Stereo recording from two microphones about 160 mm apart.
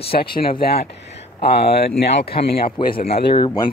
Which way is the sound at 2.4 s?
35° left (ahead or behind).